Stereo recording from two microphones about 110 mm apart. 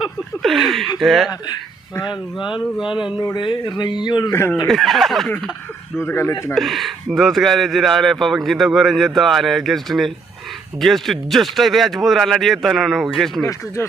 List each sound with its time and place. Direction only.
0.4 s speech: centre (ahead or behind)
2.0 s speech: 50° left (ahead or behind)
4.3 s speech: 25° left (ahead or behind)
4.6 s speech: centre (ahead or behind)
6.0 s speech: 20° left (ahead or behind)
6.5 s speech: centre (ahead or behind)